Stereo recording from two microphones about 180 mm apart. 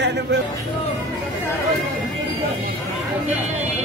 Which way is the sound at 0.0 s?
75° right (ahead or behind).